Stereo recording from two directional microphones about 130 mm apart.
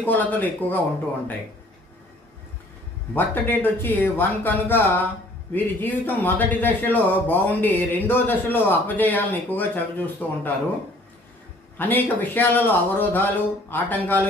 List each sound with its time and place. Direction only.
0.0 s speech: 15° left (ahead or behind)
3.2 s speech: 15° left (ahead or behind)
11.8 s speech: 15° left (ahead or behind)